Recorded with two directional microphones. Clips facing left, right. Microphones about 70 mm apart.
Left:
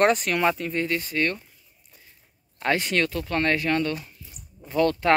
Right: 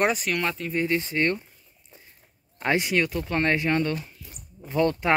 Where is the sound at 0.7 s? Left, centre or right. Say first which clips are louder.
Right 1 dB; right.